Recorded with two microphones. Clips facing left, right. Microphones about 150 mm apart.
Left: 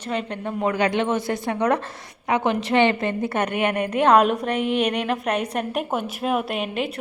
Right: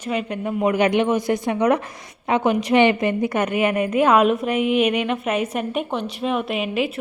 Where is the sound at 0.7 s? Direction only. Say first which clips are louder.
Right 3 dB; 20° right (ahead or behind).